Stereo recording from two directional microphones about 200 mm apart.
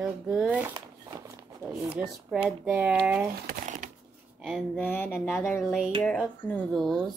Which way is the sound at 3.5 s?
35° right (ahead or behind).